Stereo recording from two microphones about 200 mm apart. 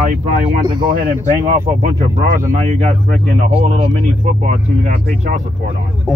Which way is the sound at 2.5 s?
35° right (ahead or behind).